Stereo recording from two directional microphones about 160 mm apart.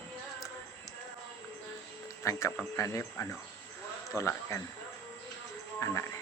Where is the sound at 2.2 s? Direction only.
20° left (ahead or behind).